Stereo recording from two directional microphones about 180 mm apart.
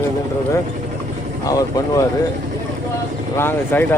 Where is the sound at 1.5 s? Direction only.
20° left (ahead or behind).